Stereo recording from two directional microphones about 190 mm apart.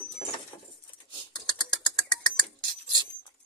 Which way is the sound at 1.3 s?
20° left (ahead or behind).